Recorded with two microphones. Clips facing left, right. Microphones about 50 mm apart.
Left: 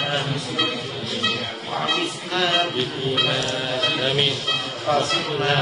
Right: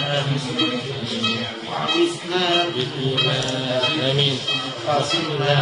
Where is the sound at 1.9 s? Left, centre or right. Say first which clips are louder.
Right 4 dB; centre.